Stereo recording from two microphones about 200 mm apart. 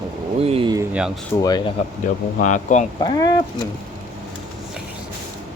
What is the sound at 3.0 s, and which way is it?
Speech, 20° left (ahead or behind).